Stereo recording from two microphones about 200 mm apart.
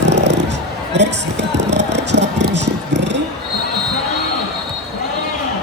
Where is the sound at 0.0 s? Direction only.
60° right (ahead or behind).